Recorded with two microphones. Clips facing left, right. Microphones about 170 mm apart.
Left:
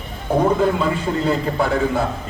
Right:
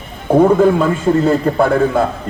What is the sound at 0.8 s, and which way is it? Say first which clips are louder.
A man's voice: right 7 dB; 45° right (ahead or behind).